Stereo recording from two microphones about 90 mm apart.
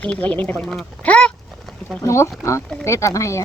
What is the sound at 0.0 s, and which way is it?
Speech, 15° left (ahead or behind).